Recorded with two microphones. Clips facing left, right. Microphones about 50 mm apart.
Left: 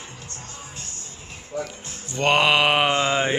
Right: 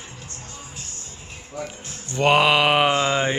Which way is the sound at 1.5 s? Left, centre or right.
Left.